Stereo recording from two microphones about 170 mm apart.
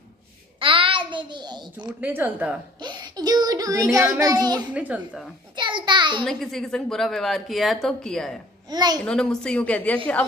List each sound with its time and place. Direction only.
0.6 s a child's voice: 30° right (ahead or behind)
2.0 s speech: 10° right (ahead or behind)
2.8 s a child's voice: 25° right (ahead or behind)
4.7 s speech: 10° right (ahead or behind)
5.6 s a sound: 30° right (ahead or behind)
6.2 s a woman's voice: centre (ahead or behind)
8.6 s a child's voice: 25° right (ahead or behind)
9.0 s a woman's voice: 5° left (ahead or behind)